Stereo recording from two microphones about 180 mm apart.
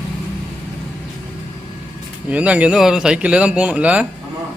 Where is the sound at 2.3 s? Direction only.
5° right (ahead or behind).